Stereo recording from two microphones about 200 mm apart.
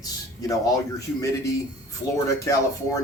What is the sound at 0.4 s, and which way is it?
Speech, 15° left (ahead or behind).